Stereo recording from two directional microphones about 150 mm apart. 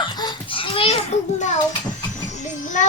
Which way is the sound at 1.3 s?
55° left (ahead or behind).